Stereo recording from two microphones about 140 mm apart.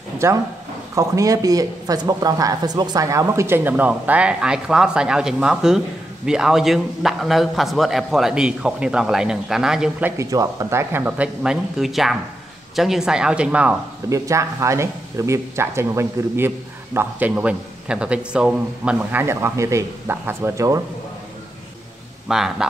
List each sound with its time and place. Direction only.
0.2 s a man's voice: 20° right (ahead or behind)
10.1 s a man's voice: 25° right (ahead or behind)
14.0 s speech: 20° right (ahead or behind)
19.2 s speech: 20° right (ahead or behind)
22.3 s a man's voice: 5° right (ahead or behind)